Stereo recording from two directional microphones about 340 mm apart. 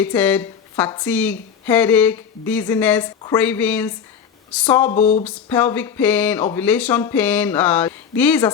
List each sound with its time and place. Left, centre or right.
0.0 s a woman's voice: centre
4.9 s a sound: centre
5.2 s a woman's voice: centre